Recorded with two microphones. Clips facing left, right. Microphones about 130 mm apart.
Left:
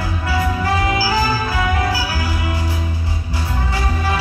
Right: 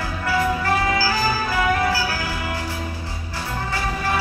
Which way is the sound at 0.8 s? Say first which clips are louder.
Left 2 dB; 15° left (ahead or behind).